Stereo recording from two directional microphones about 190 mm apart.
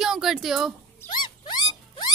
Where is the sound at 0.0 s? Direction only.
Centre (ahead or behind).